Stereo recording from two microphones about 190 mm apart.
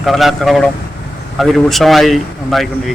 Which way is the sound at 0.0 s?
Centre (ahead or behind).